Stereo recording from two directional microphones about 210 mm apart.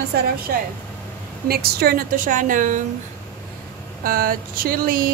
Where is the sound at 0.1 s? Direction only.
50° right (ahead or behind).